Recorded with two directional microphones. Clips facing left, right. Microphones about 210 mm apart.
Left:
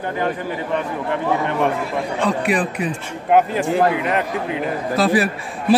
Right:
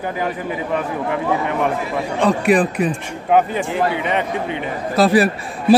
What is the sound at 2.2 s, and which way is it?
Speech, 45° right (ahead or behind).